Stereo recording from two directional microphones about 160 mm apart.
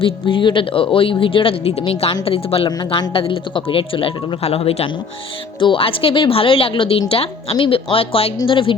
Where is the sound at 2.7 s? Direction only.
25° left (ahead or behind).